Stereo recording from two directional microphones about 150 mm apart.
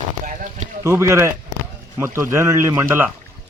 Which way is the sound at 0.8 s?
20° right (ahead or behind).